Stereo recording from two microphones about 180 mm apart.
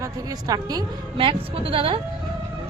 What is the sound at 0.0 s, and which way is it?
A woman's voice, 20° right (ahead or behind).